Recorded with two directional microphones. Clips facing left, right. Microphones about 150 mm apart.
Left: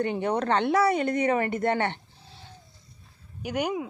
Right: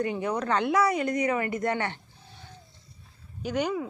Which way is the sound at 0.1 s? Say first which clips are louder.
Left 2 dB; 55° left (ahead or behind).